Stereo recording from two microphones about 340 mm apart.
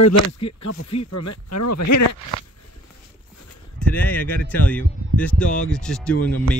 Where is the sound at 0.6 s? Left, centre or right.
Left.